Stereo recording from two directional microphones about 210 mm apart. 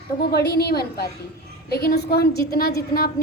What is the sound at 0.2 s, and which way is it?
Speech, 50° left (ahead or behind).